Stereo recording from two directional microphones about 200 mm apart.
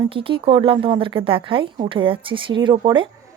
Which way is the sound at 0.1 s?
25° right (ahead or behind).